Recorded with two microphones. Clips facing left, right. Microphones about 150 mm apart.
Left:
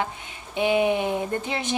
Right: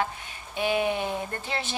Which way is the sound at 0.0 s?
20° left (ahead or behind).